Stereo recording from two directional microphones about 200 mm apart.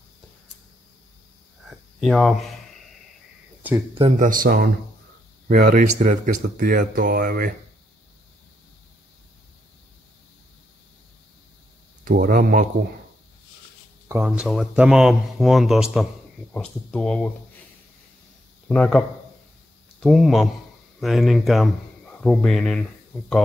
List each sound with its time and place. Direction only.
1.7 s speech: centre (ahead or behind)
4.0 s speech: 40° right (ahead or behind)
12.0 s speech: 45° right (ahead or behind)
14.0 s speech: 10° right (ahead or behind); by 17.3 s 5° left (ahead or behind)
18.7 s speech: 5° left (ahead or behind)